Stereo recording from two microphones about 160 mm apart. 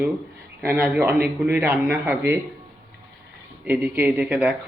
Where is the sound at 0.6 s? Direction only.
15° right (ahead or behind).